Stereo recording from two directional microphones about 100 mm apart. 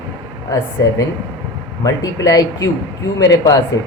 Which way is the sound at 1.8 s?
35° left (ahead or behind).